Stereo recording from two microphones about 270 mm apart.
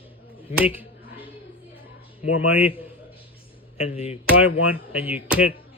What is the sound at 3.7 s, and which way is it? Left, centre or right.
Speech, left.